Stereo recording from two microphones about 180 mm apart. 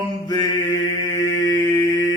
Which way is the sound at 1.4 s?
20° left (ahead or behind).